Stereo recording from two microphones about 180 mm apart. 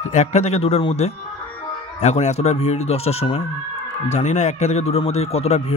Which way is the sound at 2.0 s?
40° left (ahead or behind).